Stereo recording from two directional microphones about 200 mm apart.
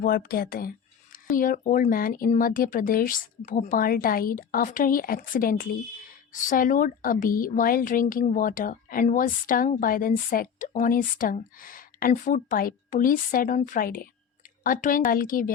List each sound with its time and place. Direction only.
0.0 s speech: 45° left (ahead or behind)